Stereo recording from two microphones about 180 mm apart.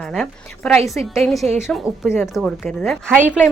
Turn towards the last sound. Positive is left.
turn(degrees=-10)  # may be behind; listen again after turning